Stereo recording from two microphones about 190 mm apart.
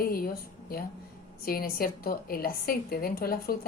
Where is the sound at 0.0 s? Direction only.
50° left (ahead or behind).